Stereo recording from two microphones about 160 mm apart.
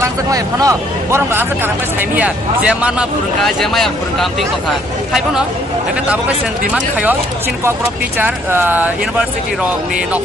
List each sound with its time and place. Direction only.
0.0 s speech: 20° right (ahead or behind); by 4.5 s centre (ahead or behind)
6.7 s speech: 10° right (ahead or behind)
8.2 s speech: 15° right (ahead or behind)